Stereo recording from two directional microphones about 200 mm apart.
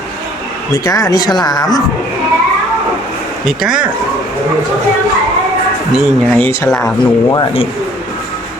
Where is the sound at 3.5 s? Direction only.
5° right (ahead or behind).